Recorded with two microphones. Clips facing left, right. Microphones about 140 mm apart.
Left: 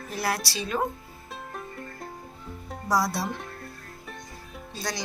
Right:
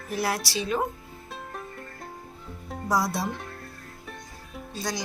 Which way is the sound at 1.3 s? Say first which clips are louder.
Even; centre (ahead or behind).